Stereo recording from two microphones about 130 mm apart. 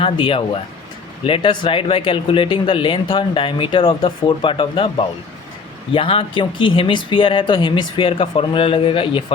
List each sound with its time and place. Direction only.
0.0 s speech: 40° left (ahead or behind)